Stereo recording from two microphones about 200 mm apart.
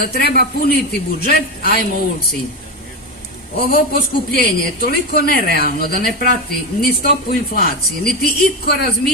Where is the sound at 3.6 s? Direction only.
50° left (ahead or behind).